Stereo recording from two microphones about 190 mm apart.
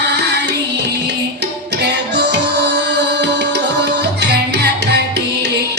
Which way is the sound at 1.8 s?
65° right (ahead or behind).